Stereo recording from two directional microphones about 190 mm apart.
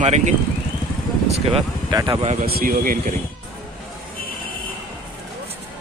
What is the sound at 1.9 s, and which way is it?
Speech, 20° right (ahead or behind).